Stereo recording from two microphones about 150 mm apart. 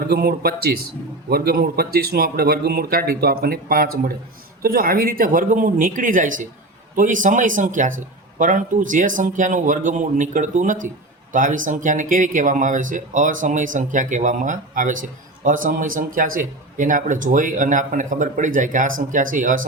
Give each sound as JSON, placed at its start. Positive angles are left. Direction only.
{"t": 0.1, "sound": "speech", "side_deg": -90}